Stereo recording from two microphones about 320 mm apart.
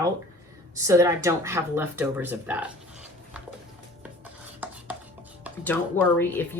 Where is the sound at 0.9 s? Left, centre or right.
Centre.